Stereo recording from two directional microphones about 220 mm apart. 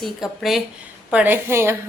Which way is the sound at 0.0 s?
Centre (ahead or behind).